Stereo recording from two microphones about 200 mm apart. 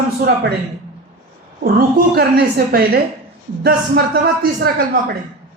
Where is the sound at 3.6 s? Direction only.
50° right (ahead or behind).